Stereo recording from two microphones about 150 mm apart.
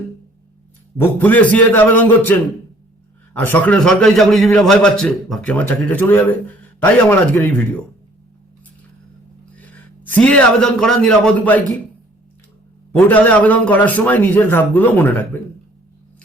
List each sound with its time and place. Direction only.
0.9 s a man's voice: 10° left (ahead or behind)
3.3 s a man's voice: 15° left (ahead or behind)
10.2 s a man's voice: 10° left (ahead or behind)
13.1 s a man's voice: 10° left (ahead or behind)